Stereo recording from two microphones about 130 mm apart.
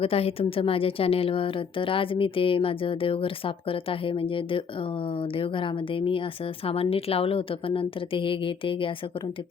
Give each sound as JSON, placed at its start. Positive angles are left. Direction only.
{"t": 0.0, "sound": "a woman's voice", "side_deg": 50}